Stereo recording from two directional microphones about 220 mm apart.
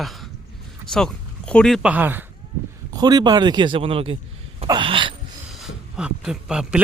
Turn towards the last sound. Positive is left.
turn(degrees=-5)  # may be behind; listen again after turning